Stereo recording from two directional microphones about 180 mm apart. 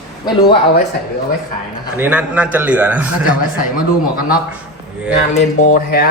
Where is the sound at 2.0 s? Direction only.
10° right (ahead or behind).